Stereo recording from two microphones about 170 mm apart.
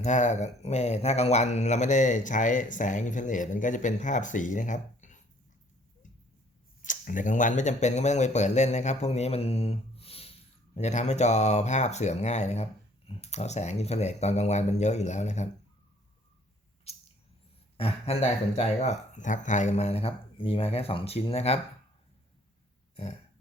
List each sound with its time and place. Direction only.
0.0 s speech: 45° left (ahead or behind)
6.8 s speech: 50° left (ahead or behind)
16.9 s a sound: 35° left (ahead or behind)
17.7 s speech: 35° left (ahead or behind)